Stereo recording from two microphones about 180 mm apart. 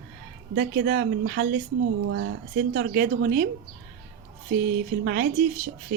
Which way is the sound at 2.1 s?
90° right.